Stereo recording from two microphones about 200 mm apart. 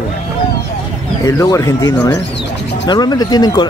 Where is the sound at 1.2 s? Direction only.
15° left (ahead or behind).